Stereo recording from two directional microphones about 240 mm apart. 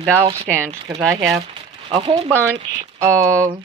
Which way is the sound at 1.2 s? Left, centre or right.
Centre.